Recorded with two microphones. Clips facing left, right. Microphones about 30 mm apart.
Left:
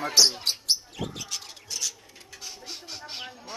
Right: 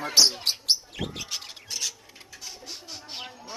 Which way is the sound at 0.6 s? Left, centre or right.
Right.